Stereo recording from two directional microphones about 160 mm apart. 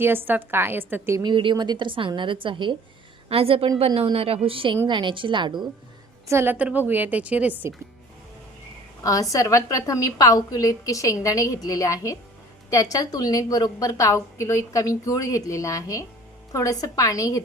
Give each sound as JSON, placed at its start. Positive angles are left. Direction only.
{"t": 0.0, "sound": "a woman's voice", "side_deg": -15}
{"t": 1.2, "sound": "a woman's voice", "side_deg": -30}
{"t": 6.2, "sound": "a woman's voice", "side_deg": -15}
{"t": 9.3, "sound": "a woman's voice", "side_deg": 20}